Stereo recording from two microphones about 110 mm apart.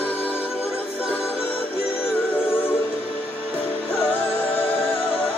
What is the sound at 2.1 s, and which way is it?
Music, 15° left (ahead or behind).